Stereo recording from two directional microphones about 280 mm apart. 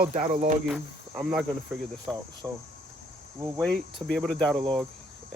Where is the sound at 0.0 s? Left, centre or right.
Right.